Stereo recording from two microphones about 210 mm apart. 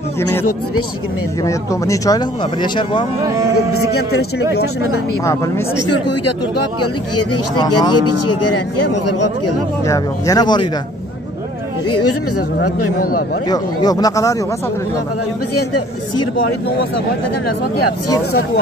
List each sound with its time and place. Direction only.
1.4 s speech: 15° left (ahead or behind)
5.2 s speech: 15° left (ahead or behind)
7.5 s speech: 20° left (ahead or behind)
8.1 s speech: 90° left
9.8 s speech: 15° left (ahead or behind)
11.9 s speech: 90° left
13.5 s speech: 20° left (ahead or behind)